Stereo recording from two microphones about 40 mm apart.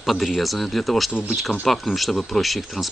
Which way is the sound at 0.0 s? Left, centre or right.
Centre.